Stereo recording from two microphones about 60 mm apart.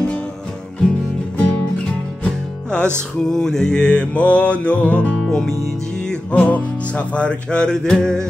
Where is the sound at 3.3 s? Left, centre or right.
Centre.